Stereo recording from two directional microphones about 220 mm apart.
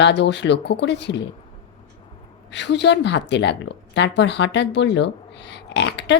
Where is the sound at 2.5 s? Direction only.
50° left (ahead or behind).